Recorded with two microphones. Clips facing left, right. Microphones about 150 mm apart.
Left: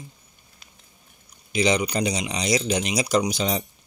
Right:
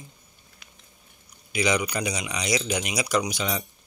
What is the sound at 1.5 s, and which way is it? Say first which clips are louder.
Speech: left 3 dB; 30° left (ahead or behind).